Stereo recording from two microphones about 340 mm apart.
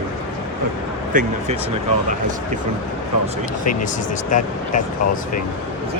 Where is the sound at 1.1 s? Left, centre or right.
Right.